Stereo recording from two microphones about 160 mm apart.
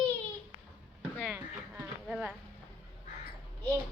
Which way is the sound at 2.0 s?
5° right (ahead or behind).